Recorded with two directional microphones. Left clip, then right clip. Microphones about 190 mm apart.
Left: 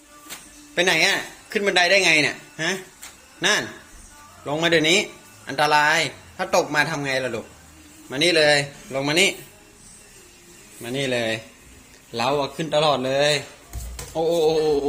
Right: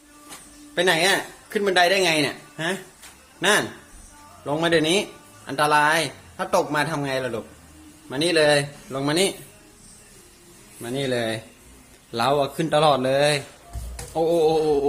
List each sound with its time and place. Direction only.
0.8 s speech: 15° right (ahead or behind)
10.8 s speech: 20° right (ahead or behind)